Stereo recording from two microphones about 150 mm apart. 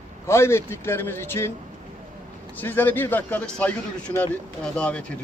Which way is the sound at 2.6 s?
15° left (ahead or behind).